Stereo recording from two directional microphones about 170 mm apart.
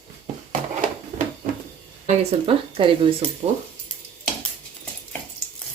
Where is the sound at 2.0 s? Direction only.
30° right (ahead or behind).